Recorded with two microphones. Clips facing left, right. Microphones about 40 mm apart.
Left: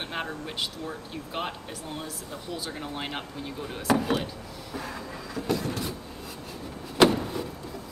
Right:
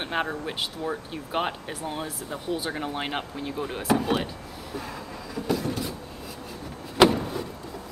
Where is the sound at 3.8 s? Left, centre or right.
Centre.